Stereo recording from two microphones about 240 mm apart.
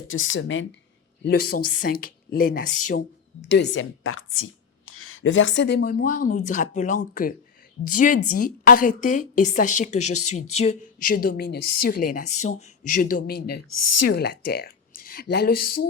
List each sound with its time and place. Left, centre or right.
0.1 s a woman's voice: left
1.2 s a woman's voice: left
3.5 s a woman's voice: left
13.5 s a woman's voice: left
14.1 s speech: left